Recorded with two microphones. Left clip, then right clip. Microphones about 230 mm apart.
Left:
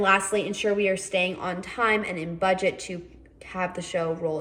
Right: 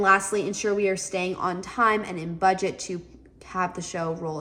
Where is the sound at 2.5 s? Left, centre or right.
Centre.